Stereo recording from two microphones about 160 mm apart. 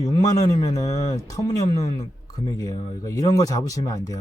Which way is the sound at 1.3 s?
20° left (ahead or behind).